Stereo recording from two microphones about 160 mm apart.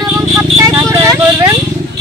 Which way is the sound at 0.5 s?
20° right (ahead or behind).